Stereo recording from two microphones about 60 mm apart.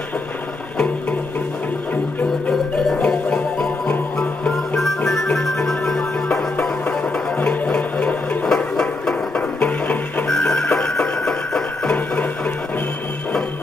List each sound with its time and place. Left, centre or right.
3.0 s music: centre
4.5 s music: centre; by 8.5 s left
8.5 s music: centre
9.6 s music: left
10.2 s music: centre
11.2 s a sound: centre